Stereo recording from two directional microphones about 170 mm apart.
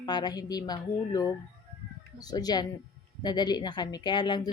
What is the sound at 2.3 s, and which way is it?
A woman's voice, 25° left (ahead or behind).